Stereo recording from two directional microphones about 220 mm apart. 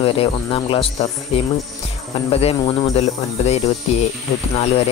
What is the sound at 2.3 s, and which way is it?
Speech, 25° left (ahead or behind).